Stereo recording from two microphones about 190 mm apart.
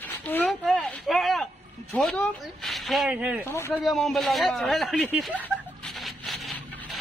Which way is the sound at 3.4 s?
15° left (ahead or behind).